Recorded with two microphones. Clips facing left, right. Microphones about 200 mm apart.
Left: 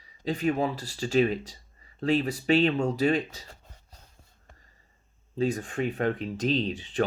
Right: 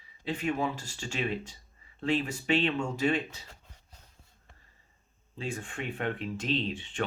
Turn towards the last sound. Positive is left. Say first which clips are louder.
# left 4 dB
turn(degrees=35)  # may be behind; listen again after turning